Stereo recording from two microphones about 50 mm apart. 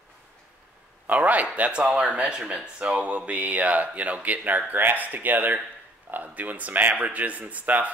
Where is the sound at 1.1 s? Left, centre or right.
Right.